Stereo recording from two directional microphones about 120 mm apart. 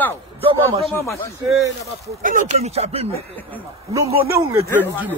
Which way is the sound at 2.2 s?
80° right.